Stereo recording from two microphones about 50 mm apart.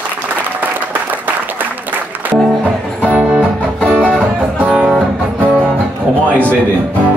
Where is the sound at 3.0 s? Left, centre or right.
Right.